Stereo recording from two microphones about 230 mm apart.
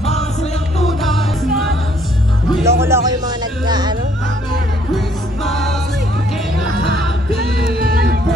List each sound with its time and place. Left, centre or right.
0.0 s music: left
0.8 s music: centre
2.6 s music: centre
4.9 s music: centre